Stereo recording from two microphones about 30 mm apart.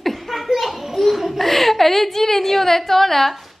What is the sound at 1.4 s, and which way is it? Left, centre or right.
A woman's voice, centre.